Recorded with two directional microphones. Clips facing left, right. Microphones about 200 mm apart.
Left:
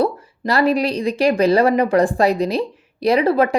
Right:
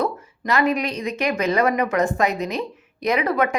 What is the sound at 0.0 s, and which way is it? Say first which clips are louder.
Speech: left 5 dB; 35° left (ahead or behind).